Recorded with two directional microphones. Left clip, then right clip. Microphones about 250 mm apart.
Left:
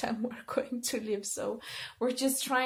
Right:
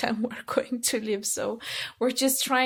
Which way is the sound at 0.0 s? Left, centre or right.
Right.